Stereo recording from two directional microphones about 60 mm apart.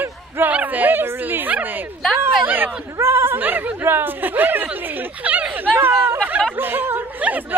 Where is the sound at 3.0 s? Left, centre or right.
Right.